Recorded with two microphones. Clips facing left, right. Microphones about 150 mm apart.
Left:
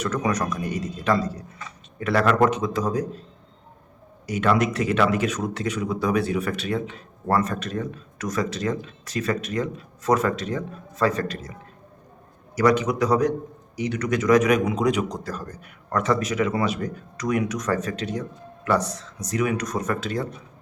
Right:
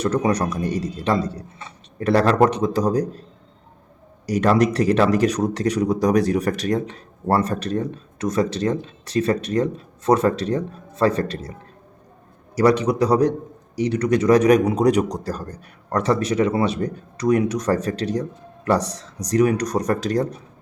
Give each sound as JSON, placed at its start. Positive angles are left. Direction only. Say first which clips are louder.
{"t": 0.0, "sound": "a man's voice", "louder": "right 4 dB", "side_deg": -30}
{"t": 4.3, "sound": "a man's voice", "louder": "right 4 dB", "side_deg": -35}
{"t": 12.5, "sound": "a man's voice", "louder": "right 3 dB", "side_deg": -30}